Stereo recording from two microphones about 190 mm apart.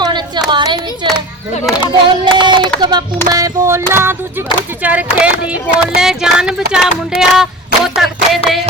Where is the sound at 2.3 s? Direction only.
25° right (ahead or behind); by 8.6 s centre (ahead or behind).